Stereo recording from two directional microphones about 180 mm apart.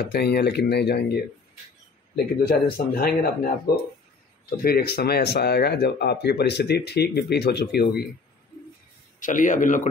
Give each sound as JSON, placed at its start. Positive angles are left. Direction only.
{"t": 0.0, "sound": "speech", "side_deg": 65}
{"t": 2.4, "sound": "speech", "side_deg": 60}
{"t": 9.2, "sound": "speech", "side_deg": 45}